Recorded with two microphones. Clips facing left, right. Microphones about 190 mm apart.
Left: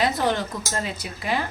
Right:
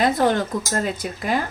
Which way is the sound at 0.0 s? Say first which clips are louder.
Right 4 dB; 50° right (ahead or behind).